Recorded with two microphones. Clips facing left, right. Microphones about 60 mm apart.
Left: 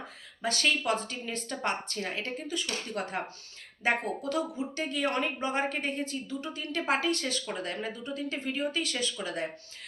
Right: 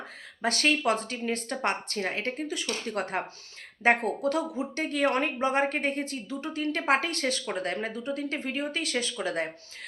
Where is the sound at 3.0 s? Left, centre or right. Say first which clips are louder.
Right 3 dB; right.